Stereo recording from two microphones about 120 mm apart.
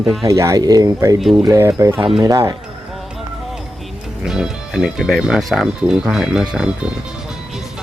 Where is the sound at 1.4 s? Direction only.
25° right (ahead or behind).